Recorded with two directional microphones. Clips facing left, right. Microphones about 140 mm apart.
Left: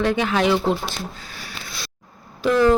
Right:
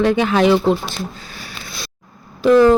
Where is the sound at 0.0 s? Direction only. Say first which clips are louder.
Right 5 dB; 20° right (ahead or behind).